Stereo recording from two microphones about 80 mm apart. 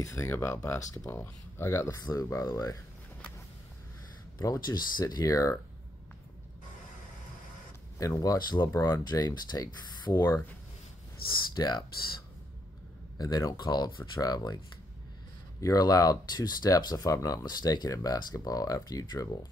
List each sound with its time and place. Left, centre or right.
0.0 s speech: left
1.1 s speech: left
4.4 s speech: left
5.0 s speech: left
8.0 s speech: left
8.4 s speech: left
8.7 s speech: left
9.0 s speech: left
11.2 s speech: left
13.2 s speech: left
15.6 s speech: left
17.6 s speech: left
17.8 s speech: left